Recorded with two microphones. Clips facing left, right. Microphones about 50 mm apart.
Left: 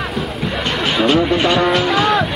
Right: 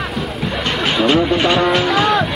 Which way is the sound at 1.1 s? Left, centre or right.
Right.